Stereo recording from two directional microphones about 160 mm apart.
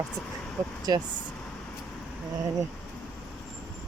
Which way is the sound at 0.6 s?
20° right (ahead or behind).